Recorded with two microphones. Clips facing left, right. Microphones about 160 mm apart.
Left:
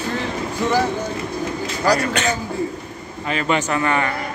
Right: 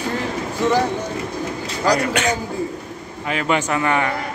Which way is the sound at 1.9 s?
10° right (ahead or behind).